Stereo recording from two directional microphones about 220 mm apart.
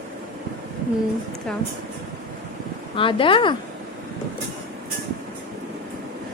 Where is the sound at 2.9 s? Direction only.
25° left (ahead or behind).